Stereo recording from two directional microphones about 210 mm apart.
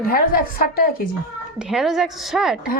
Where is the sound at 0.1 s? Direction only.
45° left (ahead or behind).